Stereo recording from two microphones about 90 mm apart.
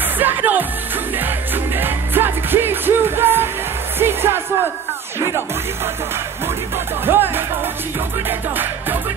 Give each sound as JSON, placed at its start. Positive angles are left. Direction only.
{"t": 0.2, "sound": "music", "side_deg": -20}
{"t": 1.8, "sound": "music", "side_deg": -25}
{"t": 7.1, "sound": "music", "side_deg": -25}